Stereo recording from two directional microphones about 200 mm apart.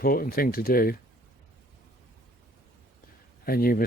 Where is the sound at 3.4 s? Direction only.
45° left (ahead or behind).